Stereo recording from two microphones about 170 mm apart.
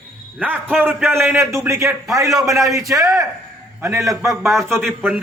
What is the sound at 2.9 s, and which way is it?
Speech, 20° right (ahead or behind).